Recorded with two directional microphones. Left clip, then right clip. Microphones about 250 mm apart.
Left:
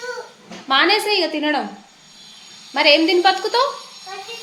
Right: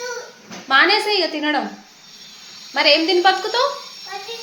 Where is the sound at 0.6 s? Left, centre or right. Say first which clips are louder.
Right 1 dB; centre.